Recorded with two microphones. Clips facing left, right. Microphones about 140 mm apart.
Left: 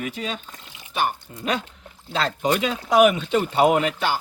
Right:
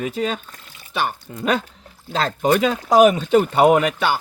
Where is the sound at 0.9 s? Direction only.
90° right.